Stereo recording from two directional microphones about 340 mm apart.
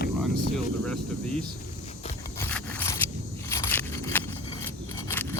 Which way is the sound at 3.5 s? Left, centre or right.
Centre.